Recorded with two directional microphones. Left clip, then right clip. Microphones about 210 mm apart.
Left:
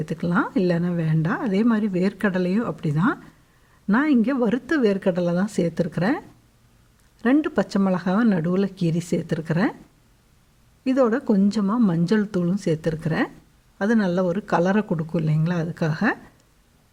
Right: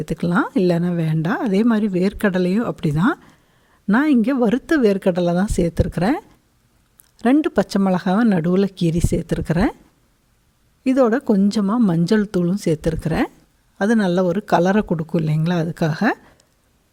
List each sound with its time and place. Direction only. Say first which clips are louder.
0.0 s speech: right 3 dB; 35° right (ahead or behind)
10.8 s speech: right 4 dB; 35° right (ahead or behind)